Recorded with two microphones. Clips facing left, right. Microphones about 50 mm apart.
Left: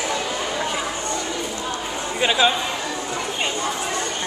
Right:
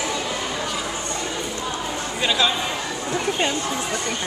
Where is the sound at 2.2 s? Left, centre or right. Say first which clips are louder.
Left 3 dB; left.